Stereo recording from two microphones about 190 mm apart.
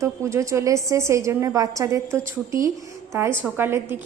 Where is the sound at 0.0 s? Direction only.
15° right (ahead or behind).